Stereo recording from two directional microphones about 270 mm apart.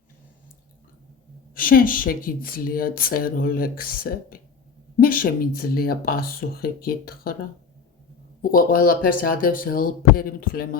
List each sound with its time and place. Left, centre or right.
1.5 s speech: left
8.4 s speech: left